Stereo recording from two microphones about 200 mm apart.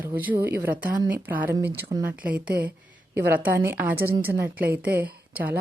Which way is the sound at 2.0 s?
5° right (ahead or behind).